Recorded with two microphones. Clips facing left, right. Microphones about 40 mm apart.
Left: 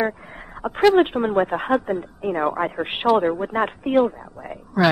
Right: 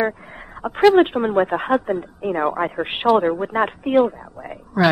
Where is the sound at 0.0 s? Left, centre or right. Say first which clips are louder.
Right 2 dB; centre.